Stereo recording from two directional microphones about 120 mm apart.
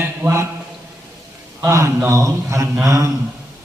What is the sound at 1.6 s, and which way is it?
Speech, 25° right (ahead or behind).